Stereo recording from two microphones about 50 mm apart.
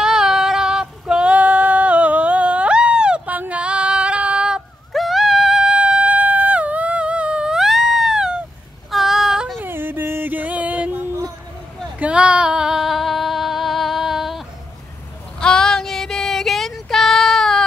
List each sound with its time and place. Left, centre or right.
0.0 s female singing: centre
4.9 s a sound: centre; by 7.5 s right
7.5 s a sound: centre
8.9 s child singing: centre
9.6 s yodeling: right
10.3 s music: right
12.0 s female singing: right; by 14.4 s centre
15.3 s child singing: centre